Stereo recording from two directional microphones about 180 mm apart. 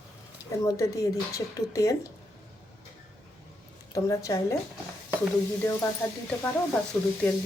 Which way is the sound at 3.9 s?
20° left (ahead or behind).